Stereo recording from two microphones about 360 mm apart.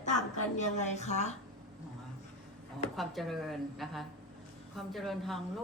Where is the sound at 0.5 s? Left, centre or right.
Centre.